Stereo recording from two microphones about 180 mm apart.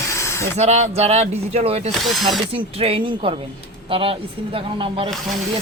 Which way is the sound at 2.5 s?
30° right (ahead or behind).